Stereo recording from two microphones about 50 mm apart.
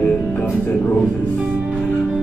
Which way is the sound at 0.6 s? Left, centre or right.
Left.